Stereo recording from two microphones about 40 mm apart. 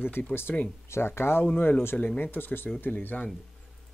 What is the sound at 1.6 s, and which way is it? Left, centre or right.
Speech, left.